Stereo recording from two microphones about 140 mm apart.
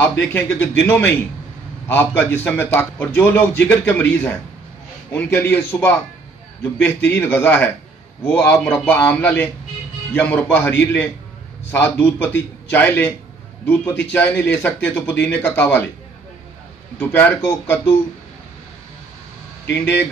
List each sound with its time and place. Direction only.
0.0 s a man's voice: 15° left (ahead or behind)
17.0 s a man's voice: 10° left (ahead or behind)
19.7 s a man's voice: 15° left (ahead or behind)